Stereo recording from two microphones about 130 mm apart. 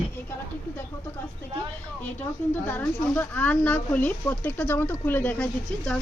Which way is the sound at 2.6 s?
15° left (ahead or behind).